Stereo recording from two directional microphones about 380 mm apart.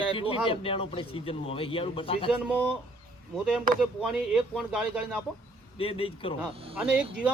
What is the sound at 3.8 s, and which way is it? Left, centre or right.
Speech, centre.